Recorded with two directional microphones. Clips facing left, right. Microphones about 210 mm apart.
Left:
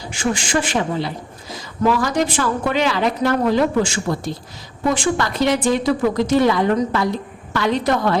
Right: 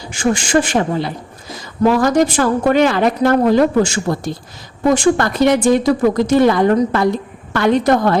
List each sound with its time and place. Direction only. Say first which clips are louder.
0.1 s a woman's voice: right 5 dB; 45° right (ahead or behind)